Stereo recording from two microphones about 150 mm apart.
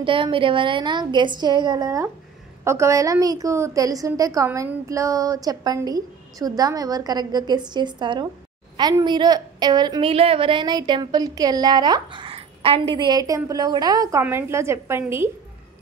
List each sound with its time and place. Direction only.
0.0 s a woman's voice: 35° right (ahead or behind); by 15.2 s 15° right (ahead or behind)